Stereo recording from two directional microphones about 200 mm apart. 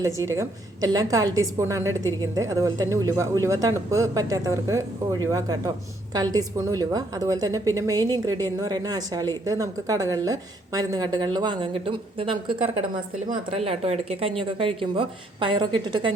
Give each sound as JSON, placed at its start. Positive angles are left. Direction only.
{"t": 0.3, "sound": "a woman's voice", "side_deg": -15}